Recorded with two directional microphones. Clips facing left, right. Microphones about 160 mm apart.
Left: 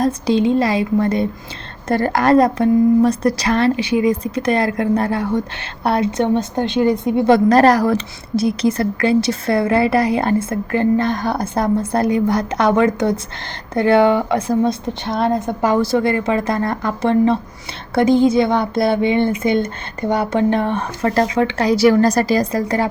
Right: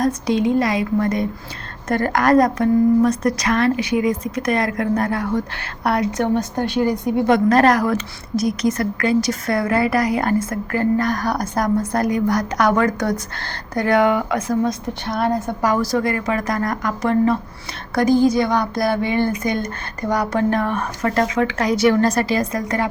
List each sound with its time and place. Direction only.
0.0 s a woman's voice: 25° left (ahead or behind)